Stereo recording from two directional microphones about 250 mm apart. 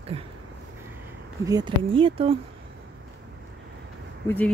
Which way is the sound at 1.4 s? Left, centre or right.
Centre.